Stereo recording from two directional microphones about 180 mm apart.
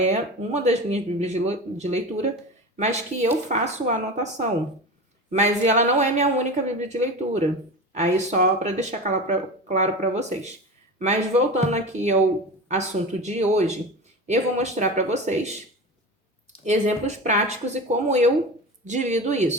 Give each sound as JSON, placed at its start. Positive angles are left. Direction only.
{"t": 0.0, "sound": "speech", "side_deg": -40}
{"t": 16.6, "sound": "speech", "side_deg": -40}